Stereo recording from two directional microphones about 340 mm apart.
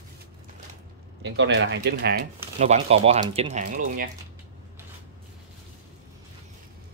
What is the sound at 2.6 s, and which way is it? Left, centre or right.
Speech, centre.